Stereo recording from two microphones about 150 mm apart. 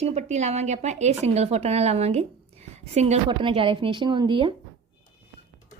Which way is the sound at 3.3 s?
35° right (ahead or behind).